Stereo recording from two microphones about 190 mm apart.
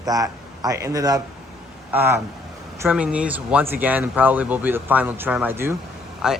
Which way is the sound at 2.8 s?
5° right (ahead or behind).